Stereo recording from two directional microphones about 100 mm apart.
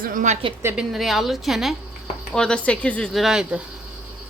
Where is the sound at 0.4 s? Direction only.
60° right (ahead or behind).